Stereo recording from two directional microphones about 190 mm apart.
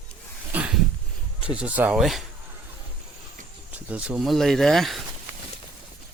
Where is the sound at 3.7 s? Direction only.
5° right (ahead or behind).